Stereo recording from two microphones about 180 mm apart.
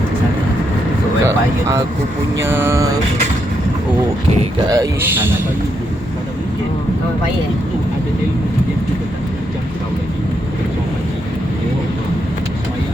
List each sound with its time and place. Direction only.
1.2 s speech: 15° right (ahead or behind)
4.7 s speech: 15° right (ahead or behind)